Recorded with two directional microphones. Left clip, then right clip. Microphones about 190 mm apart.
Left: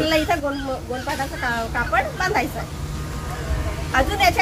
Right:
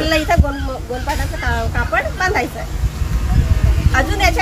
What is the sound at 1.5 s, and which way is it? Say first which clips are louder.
Speech: right 3 dB; 5° left (ahead or behind).